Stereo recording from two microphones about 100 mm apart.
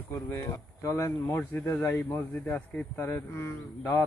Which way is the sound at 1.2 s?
20° left (ahead or behind).